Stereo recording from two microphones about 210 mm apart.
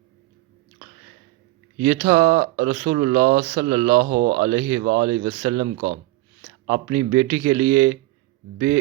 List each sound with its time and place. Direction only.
2.0 s speech: 35° right (ahead or behind)
4.4 s speech: 25° right (ahead or behind)
4.8 s speech: 45° right (ahead or behind)
6.7 s speech: 30° right (ahead or behind)